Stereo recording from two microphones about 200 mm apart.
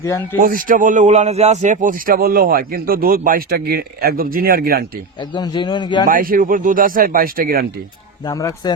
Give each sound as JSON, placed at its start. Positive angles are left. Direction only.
{"t": 0.3, "sound": "a man's voice", "side_deg": -40}
{"t": 5.3, "sound": "a man's voice", "side_deg": 25}
{"t": 6.1, "sound": "a man's voice", "side_deg": -45}
{"t": 8.2, "sound": "a man's voice", "side_deg": 15}